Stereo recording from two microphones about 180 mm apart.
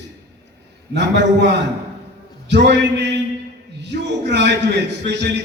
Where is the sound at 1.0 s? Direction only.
70° right (ahead or behind).